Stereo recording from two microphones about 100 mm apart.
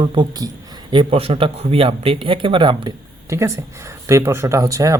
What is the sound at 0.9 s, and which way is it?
Speech, 65° right (ahead or behind).